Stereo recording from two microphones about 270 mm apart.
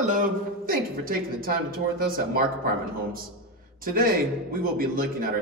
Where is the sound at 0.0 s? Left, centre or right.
Right.